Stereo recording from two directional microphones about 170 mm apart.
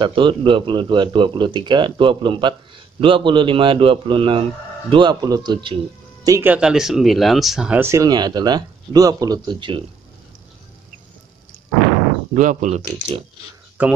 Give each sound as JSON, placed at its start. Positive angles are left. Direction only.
{"t": 0.0, "sound": "a man's voice", "side_deg": -30}
{"t": 6.5, "sound": "speech", "side_deg": -5}
{"t": 12.4, "sound": "speech", "side_deg": -45}
{"t": 13.8, "sound": "speech", "side_deg": -10}